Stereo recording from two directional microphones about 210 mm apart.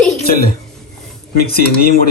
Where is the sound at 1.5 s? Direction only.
45° left (ahead or behind).